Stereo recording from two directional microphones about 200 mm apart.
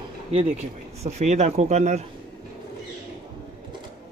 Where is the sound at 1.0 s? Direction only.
35° right (ahead or behind).